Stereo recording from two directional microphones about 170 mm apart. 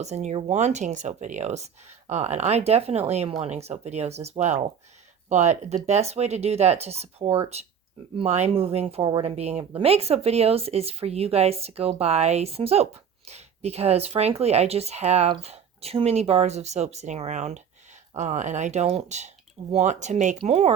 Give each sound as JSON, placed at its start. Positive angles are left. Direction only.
{"t": 0.0, "sound": "speech", "side_deg": -40}